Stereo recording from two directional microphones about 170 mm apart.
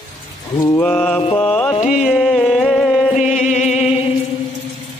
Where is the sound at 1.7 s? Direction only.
45° left (ahead or behind).